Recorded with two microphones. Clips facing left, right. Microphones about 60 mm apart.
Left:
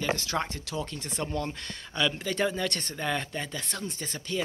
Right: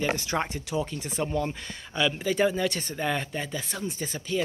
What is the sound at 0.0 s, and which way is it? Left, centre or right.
Speech, centre.